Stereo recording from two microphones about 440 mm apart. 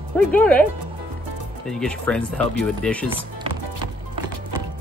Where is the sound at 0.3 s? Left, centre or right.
Centre.